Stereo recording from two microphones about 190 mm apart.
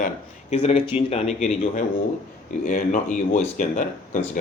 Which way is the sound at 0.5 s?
30° left (ahead or behind).